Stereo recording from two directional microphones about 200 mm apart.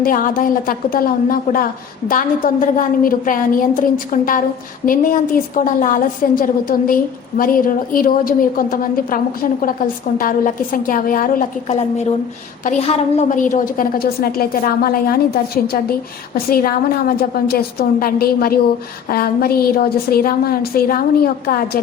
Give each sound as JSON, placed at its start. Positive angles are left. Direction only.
{"t": 0.0, "sound": "a woman's voice", "side_deg": 45}